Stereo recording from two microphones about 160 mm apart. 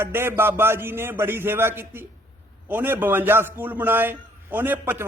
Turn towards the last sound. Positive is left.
turn(degrees=-15)  # may be behind; listen again after turning